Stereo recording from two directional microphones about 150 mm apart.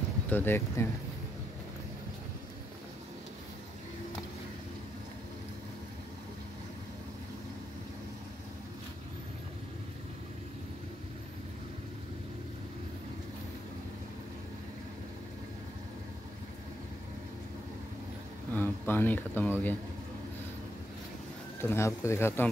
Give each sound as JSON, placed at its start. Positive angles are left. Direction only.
{"t": 0.3, "sound": "speech", "side_deg": 15}
{"t": 18.5, "sound": "speech", "side_deg": 15}
{"t": 21.5, "sound": "speech", "side_deg": 15}